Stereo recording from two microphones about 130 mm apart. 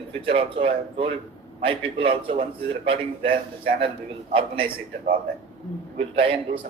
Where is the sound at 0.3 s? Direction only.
45° right (ahead or behind).